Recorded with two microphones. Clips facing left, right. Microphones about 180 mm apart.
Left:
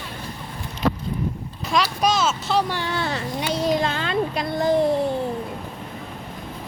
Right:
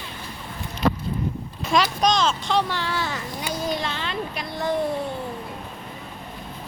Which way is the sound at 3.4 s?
75° left (ahead or behind).